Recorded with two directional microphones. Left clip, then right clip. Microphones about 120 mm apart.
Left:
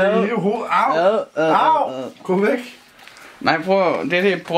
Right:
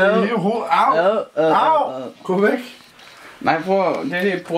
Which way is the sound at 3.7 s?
35° left (ahead or behind).